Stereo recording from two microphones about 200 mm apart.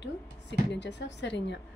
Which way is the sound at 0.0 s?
60° left (ahead or behind).